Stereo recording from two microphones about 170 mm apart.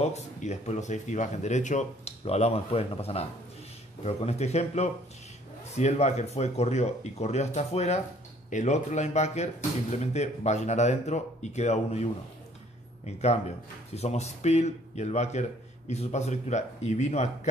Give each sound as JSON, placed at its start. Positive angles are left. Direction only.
{"t": 0.0, "sound": "speech", "side_deg": 40}